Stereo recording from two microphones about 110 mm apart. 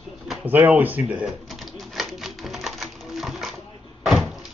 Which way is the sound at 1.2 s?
Centre (ahead or behind).